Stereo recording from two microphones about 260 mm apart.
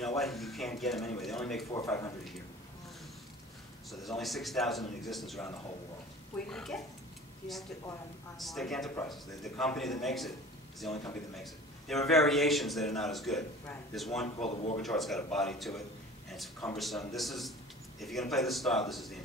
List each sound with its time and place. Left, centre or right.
0.2 s a man's voice: centre
1.7 s speech: centre
3.9 s a man's voice: centre
6.5 s a man's voice: centre
8.4 s a man's voice: centre
12.1 s a man's voice: centre
14.2 s speech: left
14.8 s a man's voice: centre